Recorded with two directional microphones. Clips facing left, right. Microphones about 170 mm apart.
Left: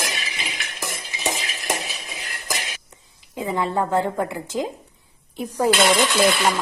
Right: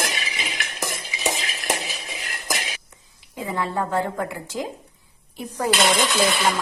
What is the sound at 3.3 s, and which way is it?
A woman's voice, 20° left (ahead or behind).